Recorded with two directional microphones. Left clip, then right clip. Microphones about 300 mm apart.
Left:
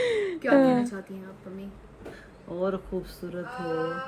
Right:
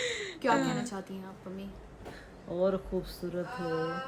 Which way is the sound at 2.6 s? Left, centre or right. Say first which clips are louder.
Even; centre.